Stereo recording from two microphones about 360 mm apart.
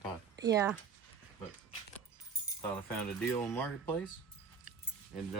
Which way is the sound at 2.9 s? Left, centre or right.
Centre.